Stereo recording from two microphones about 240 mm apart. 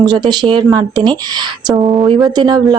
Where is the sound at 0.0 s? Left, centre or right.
Centre.